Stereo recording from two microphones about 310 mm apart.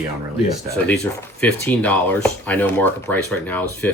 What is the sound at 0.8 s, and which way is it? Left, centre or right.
Speech, centre.